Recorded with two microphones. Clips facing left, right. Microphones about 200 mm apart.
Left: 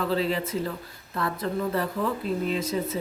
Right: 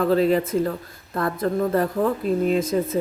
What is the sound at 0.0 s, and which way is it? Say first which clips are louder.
Speech: right 7 dB; 50° right (ahead or behind).